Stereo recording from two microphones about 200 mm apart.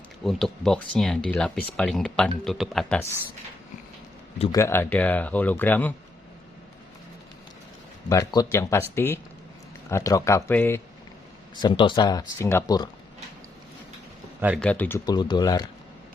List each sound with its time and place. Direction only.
0.3 s speech: centre (ahead or behind)
4.5 s speech: 15° left (ahead or behind)
8.1 s speech: 15° left (ahead or behind)
11.5 s speech: 25° left (ahead or behind)
14.4 s speech: centre (ahead or behind); by 15.6 s 20° left (ahead or behind)